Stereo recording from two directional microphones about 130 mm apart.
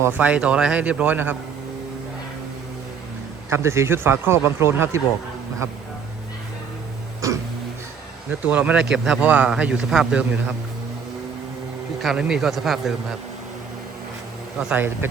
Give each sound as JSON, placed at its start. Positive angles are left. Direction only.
{"t": 0.0, "sound": "a man's voice", "side_deg": -15}
{"t": 3.5, "sound": "speech", "side_deg": -20}
{"t": 7.2, "sound": "music", "side_deg": -25}
{"t": 8.4, "sound": "a man's voice", "side_deg": -10}
{"t": 12.0, "sound": "speech", "side_deg": -5}
{"t": 14.6, "sound": "a man's voice", "side_deg": -10}